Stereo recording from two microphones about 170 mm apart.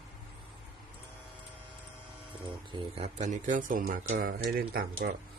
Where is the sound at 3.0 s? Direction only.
45° right (ahead or behind).